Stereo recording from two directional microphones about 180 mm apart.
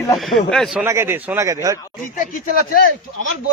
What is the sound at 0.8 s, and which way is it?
Speech, 15° right (ahead or behind).